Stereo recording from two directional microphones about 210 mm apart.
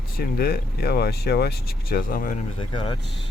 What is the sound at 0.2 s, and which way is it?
Speech, 45° left (ahead or behind).